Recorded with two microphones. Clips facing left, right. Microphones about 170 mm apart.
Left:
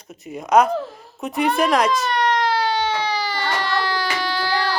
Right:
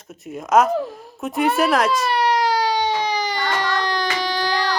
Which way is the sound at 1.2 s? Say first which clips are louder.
Right 1 dB; centre (ahead or behind).